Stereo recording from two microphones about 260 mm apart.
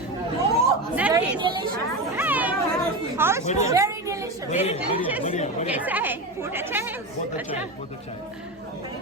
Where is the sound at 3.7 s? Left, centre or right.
Centre.